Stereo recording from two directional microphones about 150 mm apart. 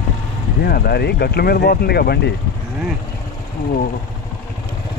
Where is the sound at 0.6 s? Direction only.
90° left.